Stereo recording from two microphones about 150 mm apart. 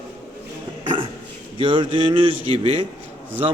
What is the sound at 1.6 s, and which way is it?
A man's voice, 35° right (ahead or behind).